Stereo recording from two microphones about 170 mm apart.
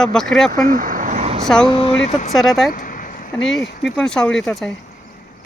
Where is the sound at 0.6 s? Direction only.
55° right (ahead or behind).